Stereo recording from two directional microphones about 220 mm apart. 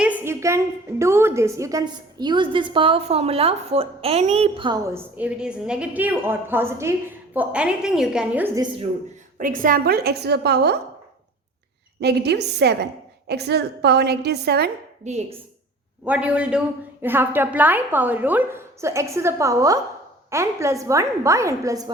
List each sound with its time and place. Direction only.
0.0 s a woman's voice: 10° right (ahead or behind)
4.9 s a woman's voice: 5° right (ahead or behind)
8.6 s a woman's voice: 25° right (ahead or behind)
9.4 s a woman's voice: 40° right (ahead or behind)
11.9 s a woman's voice: 50° right (ahead or behind)
15.0 s a woman's voice: 30° right (ahead or behind)
16.0 s a woman's voice: 5° right (ahead or behind)